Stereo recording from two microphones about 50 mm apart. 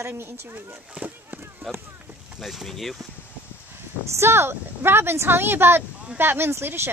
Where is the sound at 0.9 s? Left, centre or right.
Right.